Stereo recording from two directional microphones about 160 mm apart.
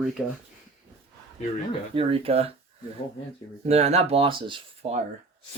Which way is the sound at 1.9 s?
35° right (ahead or behind).